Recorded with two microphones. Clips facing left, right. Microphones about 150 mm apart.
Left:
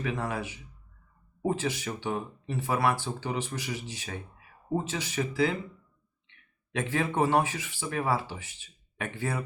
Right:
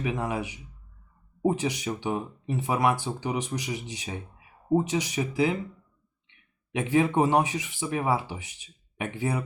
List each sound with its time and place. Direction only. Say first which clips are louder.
0.0 s speech: right 3 dB; 15° right (ahead or behind)
6.7 s speech: right 5 dB; 15° right (ahead or behind)